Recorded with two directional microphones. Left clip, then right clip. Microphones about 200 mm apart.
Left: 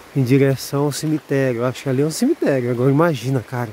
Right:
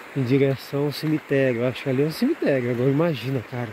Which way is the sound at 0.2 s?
40° left (ahead or behind).